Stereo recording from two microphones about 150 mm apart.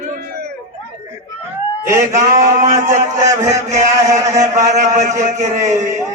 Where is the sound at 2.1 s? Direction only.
55° right (ahead or behind).